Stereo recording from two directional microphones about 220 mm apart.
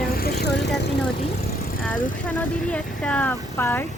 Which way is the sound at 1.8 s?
5° left (ahead or behind).